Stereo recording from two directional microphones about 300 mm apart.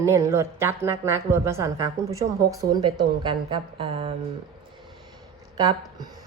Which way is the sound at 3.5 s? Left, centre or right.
Centre.